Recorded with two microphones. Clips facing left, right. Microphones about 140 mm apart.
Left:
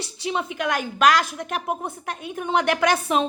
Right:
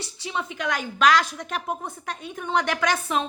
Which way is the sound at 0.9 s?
5° left (ahead or behind).